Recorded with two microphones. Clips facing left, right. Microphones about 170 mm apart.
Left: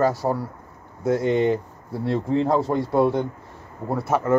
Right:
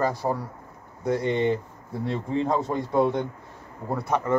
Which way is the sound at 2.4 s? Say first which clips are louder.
Left 2 dB; 30° left (ahead or behind).